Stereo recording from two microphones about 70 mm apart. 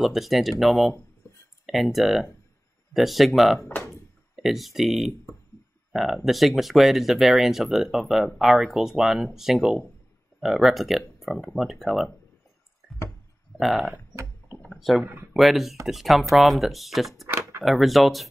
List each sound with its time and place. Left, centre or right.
0.0 s speech: centre
3.6 s a sound: left
4.4 s speech: centre
13.6 s speech: centre
17.3 s a sound: right
17.6 s speech: centre